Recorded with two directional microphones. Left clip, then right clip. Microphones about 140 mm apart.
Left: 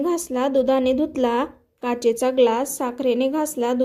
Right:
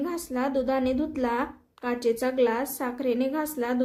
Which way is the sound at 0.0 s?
50° left (ahead or behind).